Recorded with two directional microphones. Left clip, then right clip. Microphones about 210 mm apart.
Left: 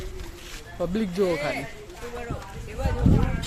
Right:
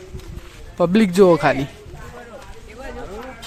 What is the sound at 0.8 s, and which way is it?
Speech, 45° right (ahead or behind).